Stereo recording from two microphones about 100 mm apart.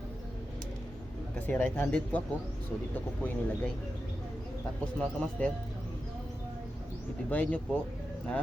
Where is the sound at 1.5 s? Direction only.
15° left (ahead or behind).